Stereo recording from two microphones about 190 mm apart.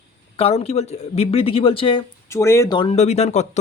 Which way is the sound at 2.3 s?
15° left (ahead or behind).